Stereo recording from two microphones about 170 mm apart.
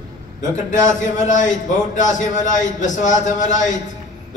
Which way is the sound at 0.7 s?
50° left (ahead or behind).